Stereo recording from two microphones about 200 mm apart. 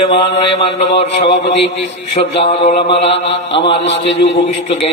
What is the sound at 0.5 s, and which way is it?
Speech, 30° left (ahead or behind).